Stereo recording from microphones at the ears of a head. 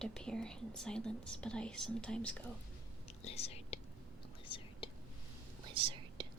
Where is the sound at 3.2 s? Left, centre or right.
Left.